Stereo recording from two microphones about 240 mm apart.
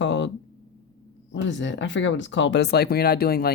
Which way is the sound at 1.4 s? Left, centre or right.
Left.